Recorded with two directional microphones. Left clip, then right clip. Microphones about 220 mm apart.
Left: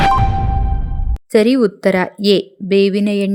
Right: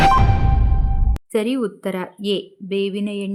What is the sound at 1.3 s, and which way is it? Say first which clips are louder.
A woman's voice: left 9 dB; 25° left (ahead or behind).